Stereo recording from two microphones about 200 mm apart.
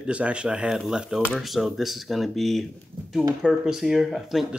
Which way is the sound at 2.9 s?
30° right (ahead or behind).